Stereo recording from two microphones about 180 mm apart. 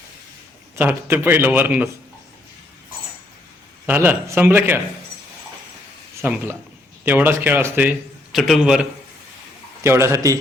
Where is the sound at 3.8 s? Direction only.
10° right (ahead or behind).